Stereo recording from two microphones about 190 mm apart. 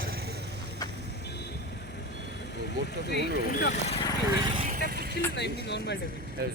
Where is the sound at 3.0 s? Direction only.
60° left (ahead or behind); by 4.0 s 35° left (ahead or behind).